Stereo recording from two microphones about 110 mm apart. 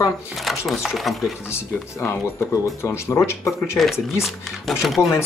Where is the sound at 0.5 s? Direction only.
Centre (ahead or behind).